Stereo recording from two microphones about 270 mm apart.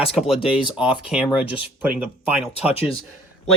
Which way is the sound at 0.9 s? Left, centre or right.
Centre.